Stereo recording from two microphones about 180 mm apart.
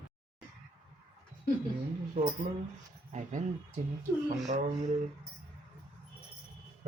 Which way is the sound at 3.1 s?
45° right (ahead or behind).